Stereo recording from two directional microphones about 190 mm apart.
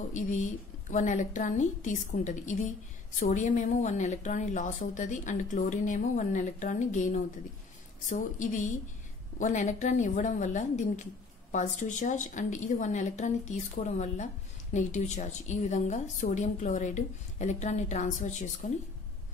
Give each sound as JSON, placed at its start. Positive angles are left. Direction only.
{"t": 0.1, "sound": "a woman's voice", "side_deg": 40}